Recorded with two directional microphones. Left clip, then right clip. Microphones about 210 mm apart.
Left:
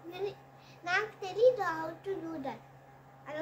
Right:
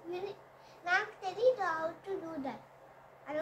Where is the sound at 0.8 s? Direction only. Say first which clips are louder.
Even; 25° left (ahead or behind).